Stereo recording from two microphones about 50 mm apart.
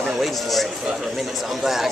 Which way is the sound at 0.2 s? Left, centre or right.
Centre.